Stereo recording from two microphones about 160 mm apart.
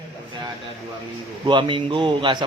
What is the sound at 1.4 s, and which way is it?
A man's voice, 30° right (ahead or behind).